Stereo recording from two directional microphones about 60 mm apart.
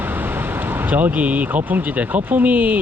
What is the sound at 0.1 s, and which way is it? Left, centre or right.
Speech, right.